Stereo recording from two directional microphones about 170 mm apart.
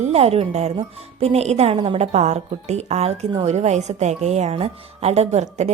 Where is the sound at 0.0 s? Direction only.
40° right (ahead or behind).